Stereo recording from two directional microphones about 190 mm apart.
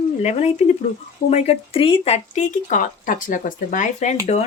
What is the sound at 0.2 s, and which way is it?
A woman's voice, 35° left (ahead or behind).